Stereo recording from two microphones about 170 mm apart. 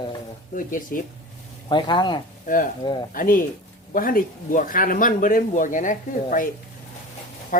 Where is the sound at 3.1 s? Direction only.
55° left (ahead or behind).